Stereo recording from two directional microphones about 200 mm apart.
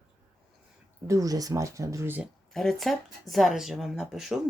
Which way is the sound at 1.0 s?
15° right (ahead or behind).